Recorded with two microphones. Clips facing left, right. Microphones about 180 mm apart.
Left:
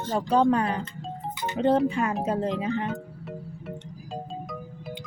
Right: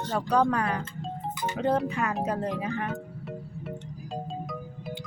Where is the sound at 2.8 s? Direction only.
Centre (ahead or behind).